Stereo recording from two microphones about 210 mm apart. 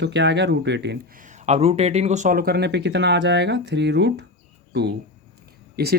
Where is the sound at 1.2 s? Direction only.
35° right (ahead or behind).